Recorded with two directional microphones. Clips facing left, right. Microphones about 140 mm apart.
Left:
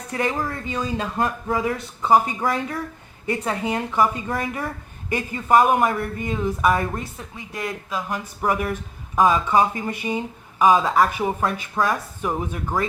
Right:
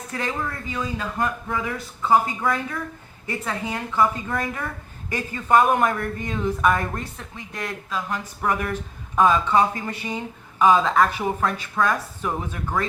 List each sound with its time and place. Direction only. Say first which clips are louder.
0.1 s speech: left 5 dB; 15° left (ahead or behind)
0.6 s speech: left 3 dB; 25° left (ahead or behind)
2.0 s speech: left 1 dB; 20° left (ahead or behind)
2.4 s speech: left 1 dB; 30° left (ahead or behind); by 12.8 s 15° left (ahead or behind)